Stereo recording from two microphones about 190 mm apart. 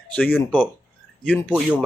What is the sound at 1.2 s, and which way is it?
Speech, 5° left (ahead or behind).